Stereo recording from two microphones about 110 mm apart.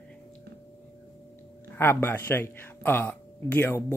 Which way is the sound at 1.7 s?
20° left (ahead or behind).